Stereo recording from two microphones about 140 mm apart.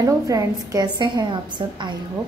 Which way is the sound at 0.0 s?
25° right (ahead or behind).